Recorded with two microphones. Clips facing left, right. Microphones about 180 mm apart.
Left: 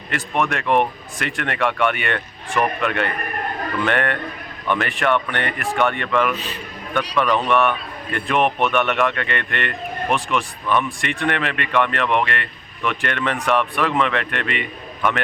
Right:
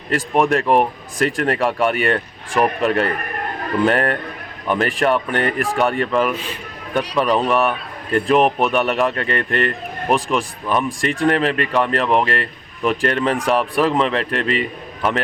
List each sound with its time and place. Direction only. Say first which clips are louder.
0.1 s a man's voice: right 6 dB; 35° right (ahead or behind)